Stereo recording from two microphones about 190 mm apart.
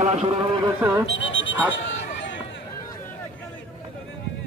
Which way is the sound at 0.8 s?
15° right (ahead or behind).